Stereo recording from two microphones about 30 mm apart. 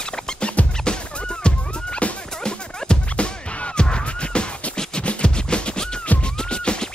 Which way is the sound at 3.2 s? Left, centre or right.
Left.